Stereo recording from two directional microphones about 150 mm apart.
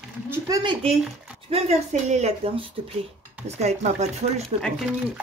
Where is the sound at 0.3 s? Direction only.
25° right (ahead or behind).